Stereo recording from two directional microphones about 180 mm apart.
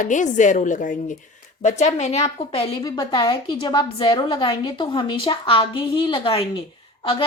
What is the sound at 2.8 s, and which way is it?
A woman's voice, 20° left (ahead or behind).